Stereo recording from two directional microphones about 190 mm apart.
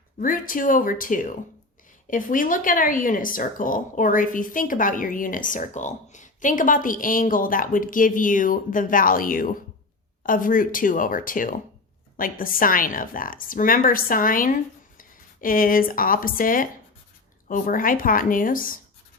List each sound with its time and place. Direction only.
0.2 s speech: 45° left (ahead or behind)